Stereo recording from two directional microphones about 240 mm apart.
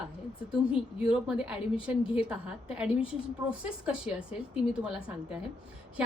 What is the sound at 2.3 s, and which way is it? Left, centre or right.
A woman's voice, centre.